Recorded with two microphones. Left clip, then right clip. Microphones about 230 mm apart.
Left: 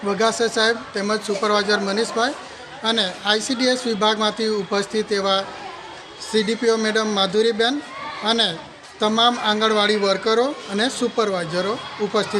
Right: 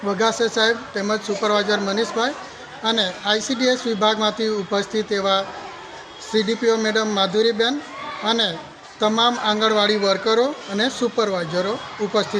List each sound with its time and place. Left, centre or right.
0.0 s speech: centre